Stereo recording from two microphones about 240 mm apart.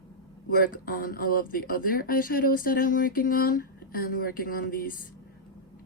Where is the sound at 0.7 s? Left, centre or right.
Left.